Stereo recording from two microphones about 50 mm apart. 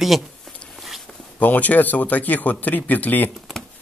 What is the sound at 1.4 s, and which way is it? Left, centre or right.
Speech, left.